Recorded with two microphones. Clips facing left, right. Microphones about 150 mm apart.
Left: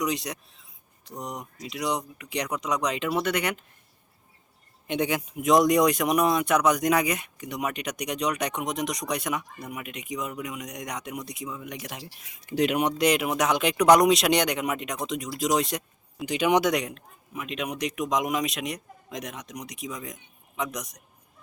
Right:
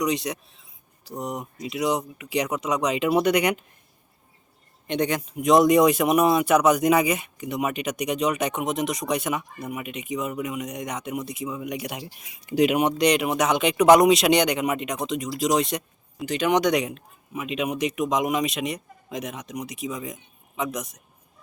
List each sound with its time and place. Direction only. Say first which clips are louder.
0.0 s speech: right 4 dB; centre (ahead or behind)
3.1 s speech: right 8 dB; 15° right (ahead or behind)
4.9 s speech: right 2 dB; 5° left (ahead or behind)
16.2 s speech: right 1 dB; 10° left (ahead or behind); by 21.0 s 5° right (ahead or behind)